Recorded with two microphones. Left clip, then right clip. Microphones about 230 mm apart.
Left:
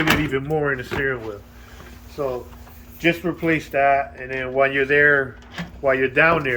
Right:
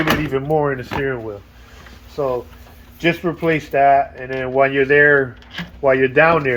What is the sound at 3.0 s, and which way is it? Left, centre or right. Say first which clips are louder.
Speech: right 2 dB; right.